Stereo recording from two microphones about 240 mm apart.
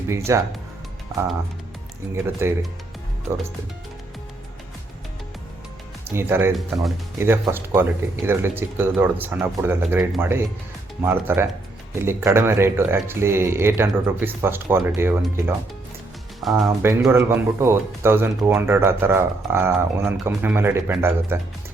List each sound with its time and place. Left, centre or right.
0.3 s speech: centre
2.2 s speech: centre
6.1 s speech: centre
16.4 s speech: centre
16.9 s speech: centre